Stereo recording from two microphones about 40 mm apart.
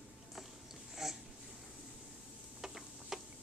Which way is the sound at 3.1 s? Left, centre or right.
Centre.